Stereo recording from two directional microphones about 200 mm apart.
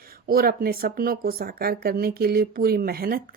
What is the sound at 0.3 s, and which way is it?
Speech, 50° right (ahead or behind).